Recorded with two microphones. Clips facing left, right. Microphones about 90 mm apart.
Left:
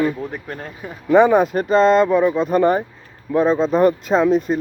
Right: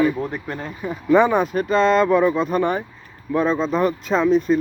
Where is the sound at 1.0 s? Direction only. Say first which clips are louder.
Left 3 dB; 40° left (ahead or behind).